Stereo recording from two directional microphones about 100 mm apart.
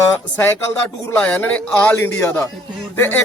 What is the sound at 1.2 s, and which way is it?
Speech, 10° left (ahead or behind).